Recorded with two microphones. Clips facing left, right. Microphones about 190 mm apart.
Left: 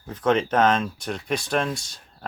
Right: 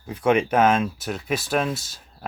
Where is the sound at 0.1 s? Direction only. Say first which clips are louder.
Right 2 dB; 10° right (ahead or behind).